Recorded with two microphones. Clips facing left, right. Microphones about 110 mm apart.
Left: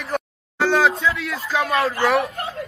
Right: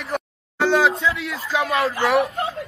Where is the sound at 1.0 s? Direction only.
25° right (ahead or behind).